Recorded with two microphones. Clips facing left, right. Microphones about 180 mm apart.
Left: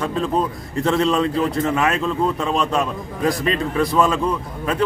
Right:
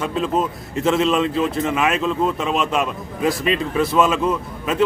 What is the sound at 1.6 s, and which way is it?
Speech, 20° right (ahead or behind).